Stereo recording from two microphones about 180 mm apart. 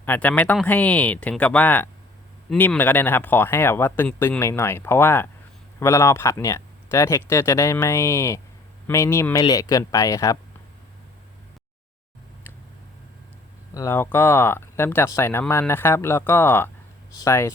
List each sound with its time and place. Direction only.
0.0 s speech: 10° left (ahead or behind)
13.7 s speech: 15° left (ahead or behind)